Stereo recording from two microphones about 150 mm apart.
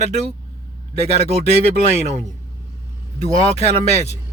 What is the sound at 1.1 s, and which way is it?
Speech, 45° right (ahead or behind).